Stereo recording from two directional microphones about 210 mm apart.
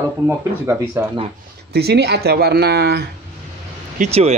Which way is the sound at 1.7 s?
50° right (ahead or behind).